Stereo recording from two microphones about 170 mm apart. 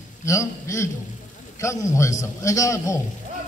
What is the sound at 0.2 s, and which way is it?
A man's voice, 15° left (ahead or behind).